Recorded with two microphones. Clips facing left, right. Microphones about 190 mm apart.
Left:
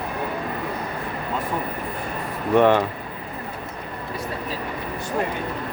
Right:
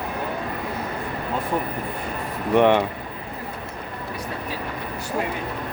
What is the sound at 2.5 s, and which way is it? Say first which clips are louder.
Speech: even; 15° right (ahead or behind).